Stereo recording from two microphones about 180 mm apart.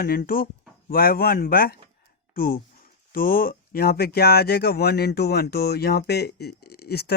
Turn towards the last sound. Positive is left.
turn(degrees=60)  # may be behind; listen again after turning